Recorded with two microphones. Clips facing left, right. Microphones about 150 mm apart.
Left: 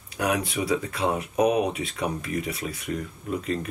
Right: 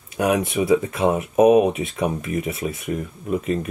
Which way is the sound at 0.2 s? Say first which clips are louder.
Right 6 dB; 25° right (ahead or behind).